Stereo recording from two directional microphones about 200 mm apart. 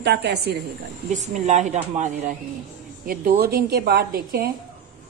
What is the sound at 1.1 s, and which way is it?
Speech, 35° right (ahead or behind).